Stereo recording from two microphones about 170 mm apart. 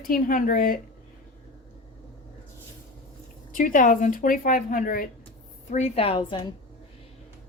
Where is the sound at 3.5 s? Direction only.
50° left (ahead or behind).